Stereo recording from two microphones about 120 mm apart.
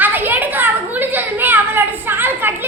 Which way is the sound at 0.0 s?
15° right (ahead or behind).